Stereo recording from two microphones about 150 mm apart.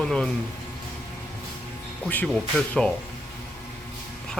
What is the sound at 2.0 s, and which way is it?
Speech, 10° left (ahead or behind).